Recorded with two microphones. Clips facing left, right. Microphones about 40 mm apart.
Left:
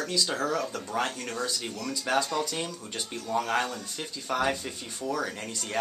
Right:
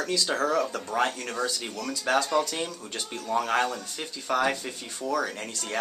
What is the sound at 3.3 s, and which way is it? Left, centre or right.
Speech, centre.